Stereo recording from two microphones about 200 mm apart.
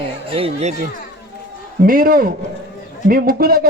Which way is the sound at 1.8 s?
45° right (ahead or behind).